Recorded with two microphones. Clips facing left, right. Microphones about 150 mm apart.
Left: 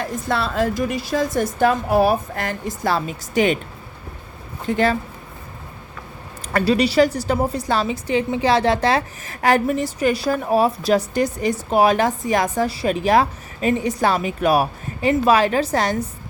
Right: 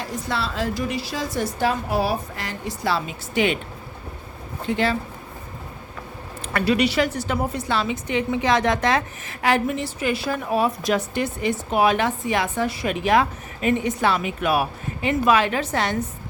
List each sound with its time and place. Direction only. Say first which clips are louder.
0.0 s a woman's voice: left 4 dB; 50° left (ahead or behind)
4.6 s a woman's voice: left 3 dB; 45° left (ahead or behind)
6.5 s a woman's voice: left 3 dB; 35° left (ahead or behind)